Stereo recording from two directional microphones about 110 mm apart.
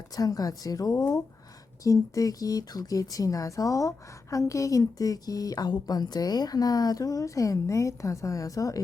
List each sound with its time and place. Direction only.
0.2 s speech: 35° left (ahead or behind)